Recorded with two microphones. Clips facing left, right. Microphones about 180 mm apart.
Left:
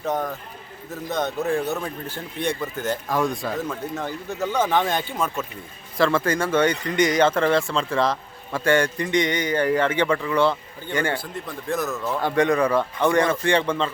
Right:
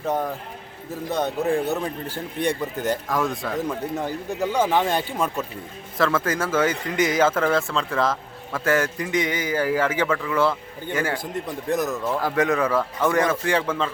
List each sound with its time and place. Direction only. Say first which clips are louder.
0.0 s speech: right 1 dB; 10° right (ahead or behind)
1.6 s speech: right 2 dB; 15° right (ahead or behind)
3.1 s speech: left 1 dB; centre (ahead or behind)
3.7 s speech: right 2 dB; 15° right (ahead or behind)
6.0 s speech: left 2 dB; centre (ahead or behind)
11.2 s speech: right 4 dB; 20° right (ahead or behind)
12.1 s speech: left 3 dB; 5° right (ahead or behind)